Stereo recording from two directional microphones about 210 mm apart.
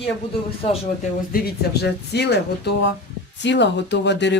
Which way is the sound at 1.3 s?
50° left (ahead or behind).